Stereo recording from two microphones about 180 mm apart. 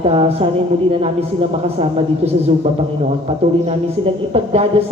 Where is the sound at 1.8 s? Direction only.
35° right (ahead or behind).